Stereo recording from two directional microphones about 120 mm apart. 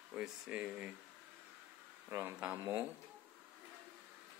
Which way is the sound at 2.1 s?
20° right (ahead or behind).